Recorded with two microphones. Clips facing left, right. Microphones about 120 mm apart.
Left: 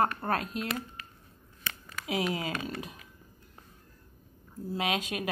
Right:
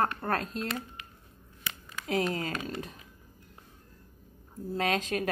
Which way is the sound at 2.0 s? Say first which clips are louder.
Right 1 dB; 10° left (ahead or behind).